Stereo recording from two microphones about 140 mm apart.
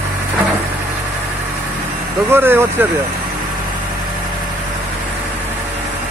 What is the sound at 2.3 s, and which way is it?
Speech, 15° right (ahead or behind).